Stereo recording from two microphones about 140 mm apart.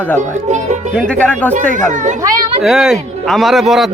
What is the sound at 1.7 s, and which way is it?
Speech, 60° right (ahead or behind).